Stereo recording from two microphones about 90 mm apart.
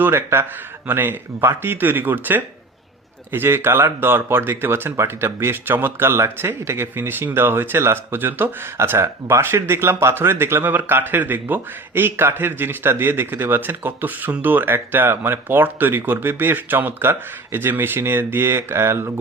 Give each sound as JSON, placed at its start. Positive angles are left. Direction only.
{"t": 0.0, "sound": "speech", "side_deg": -25}